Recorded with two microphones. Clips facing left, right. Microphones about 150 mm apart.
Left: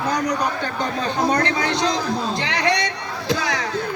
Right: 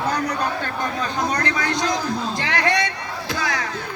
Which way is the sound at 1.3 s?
25° left (ahead or behind).